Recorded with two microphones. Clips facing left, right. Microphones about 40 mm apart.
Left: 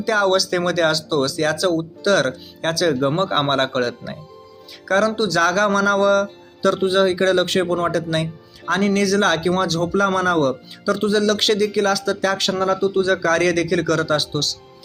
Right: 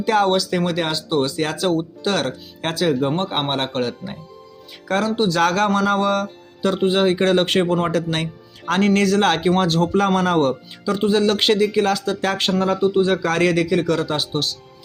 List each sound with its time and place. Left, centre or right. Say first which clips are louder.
0.0 s speech: right 1 dB; right
0.3 s speech: left 1 dB; centre; by 2.9 s right
3.2 s speech: left 4 dB; centre
5.1 s speech: right 1 dB; right
5.4 s speech: left 2 dB; right
7.6 s speech: right 1 dB; right
7.9 s speech: left 1 dB; right
10.9 s speech: right 1 dB; right